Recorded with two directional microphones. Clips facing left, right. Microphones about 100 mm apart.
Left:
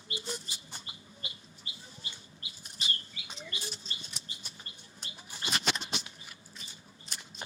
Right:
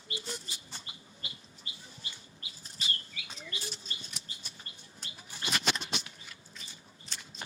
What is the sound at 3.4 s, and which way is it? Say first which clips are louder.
Chirp: left 1 dB; 25° left (ahead or behind).